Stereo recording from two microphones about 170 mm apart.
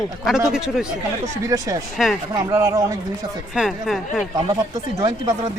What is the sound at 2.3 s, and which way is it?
Speech, 15° right (ahead or behind).